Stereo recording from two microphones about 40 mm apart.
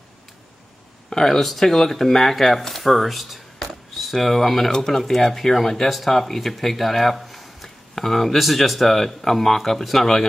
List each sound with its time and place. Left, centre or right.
1.1 s speech: centre
3.5 s a sound: centre
4.7 s speech: centre